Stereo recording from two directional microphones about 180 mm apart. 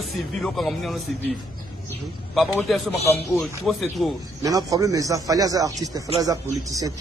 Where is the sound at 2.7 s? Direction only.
Centre (ahead or behind).